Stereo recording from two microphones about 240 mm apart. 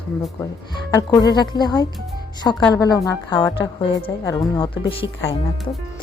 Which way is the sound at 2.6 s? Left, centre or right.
Centre.